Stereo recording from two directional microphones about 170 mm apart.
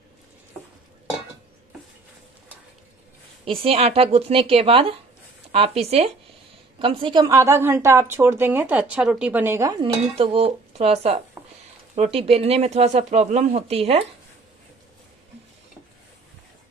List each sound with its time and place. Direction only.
3.4 s a woman's voice: 35° right (ahead or behind)
10.1 s speech: 35° right (ahead or behind)